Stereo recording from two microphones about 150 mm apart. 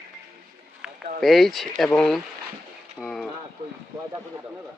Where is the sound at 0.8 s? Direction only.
5° right (ahead or behind).